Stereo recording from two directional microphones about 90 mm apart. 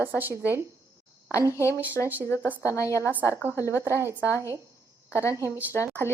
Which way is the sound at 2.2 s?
30° left (ahead or behind).